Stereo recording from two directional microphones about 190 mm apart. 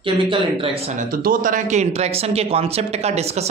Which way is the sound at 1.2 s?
45° right (ahead or behind).